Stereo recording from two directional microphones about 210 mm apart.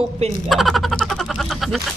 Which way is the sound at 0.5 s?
Centre (ahead or behind).